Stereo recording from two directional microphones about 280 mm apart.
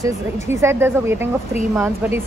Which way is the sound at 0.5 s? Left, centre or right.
Centre.